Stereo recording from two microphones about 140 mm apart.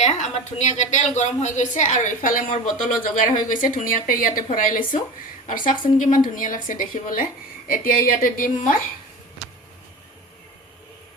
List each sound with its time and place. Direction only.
0.0 s a woman's voice: 55° left (ahead or behind)
7.7 s a woman's voice: 85° left